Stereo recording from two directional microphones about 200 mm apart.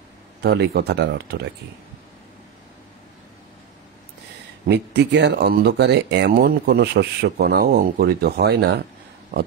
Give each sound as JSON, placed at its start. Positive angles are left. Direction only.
{"t": 0.4, "sound": "speech", "side_deg": -55}
{"t": 4.6, "sound": "speech", "side_deg": -55}